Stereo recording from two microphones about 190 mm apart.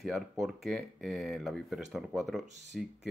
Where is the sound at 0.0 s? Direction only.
Centre (ahead or behind).